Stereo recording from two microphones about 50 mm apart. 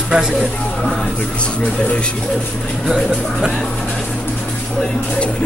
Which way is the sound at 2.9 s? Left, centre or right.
Centre.